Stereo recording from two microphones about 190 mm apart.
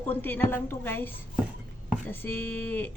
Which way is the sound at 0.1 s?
10° left (ahead or behind).